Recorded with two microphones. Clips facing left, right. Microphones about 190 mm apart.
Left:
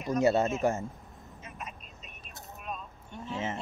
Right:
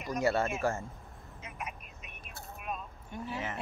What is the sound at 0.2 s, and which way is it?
Speech, 20° left (ahead or behind).